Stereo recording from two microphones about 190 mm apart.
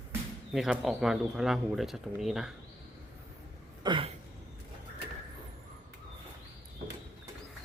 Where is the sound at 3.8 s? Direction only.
25° right (ahead or behind).